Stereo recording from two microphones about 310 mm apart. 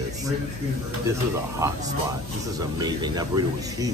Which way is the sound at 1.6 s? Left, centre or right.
Centre.